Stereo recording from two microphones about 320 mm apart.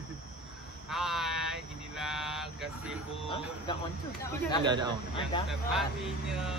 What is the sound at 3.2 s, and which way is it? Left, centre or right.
Speech, centre.